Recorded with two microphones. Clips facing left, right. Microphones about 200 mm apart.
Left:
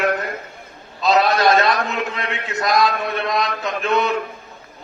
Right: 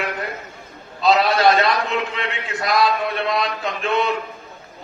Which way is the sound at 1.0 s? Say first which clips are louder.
Even; 40° left (ahead or behind).